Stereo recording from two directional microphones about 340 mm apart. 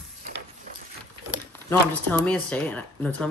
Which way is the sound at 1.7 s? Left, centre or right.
Centre.